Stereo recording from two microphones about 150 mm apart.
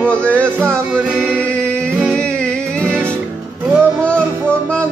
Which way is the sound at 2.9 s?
15° right (ahead or behind).